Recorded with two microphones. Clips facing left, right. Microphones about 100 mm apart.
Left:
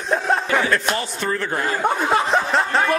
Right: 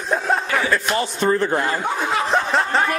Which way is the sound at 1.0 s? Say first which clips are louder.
Right 5 dB; 25° right (ahead or behind).